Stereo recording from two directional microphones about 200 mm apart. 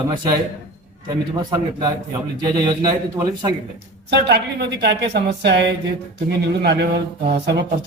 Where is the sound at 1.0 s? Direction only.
20° right (ahead or behind).